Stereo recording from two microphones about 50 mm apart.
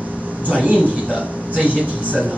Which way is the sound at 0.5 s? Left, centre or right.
Right.